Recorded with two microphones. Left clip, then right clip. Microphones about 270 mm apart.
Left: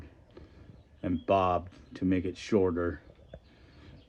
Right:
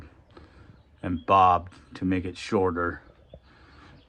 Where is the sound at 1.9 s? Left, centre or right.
Centre.